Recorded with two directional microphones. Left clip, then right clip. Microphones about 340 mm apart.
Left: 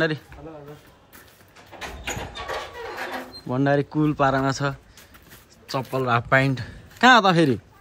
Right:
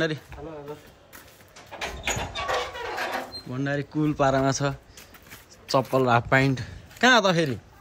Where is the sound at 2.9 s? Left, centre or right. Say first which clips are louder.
Right 1 dB; centre.